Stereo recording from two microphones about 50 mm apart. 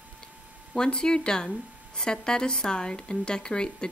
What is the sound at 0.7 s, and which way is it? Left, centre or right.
A woman's voice, centre.